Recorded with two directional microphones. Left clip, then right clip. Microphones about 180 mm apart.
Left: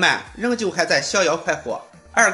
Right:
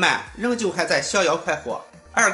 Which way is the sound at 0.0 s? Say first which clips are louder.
Left 2 dB; 15° left (ahead or behind).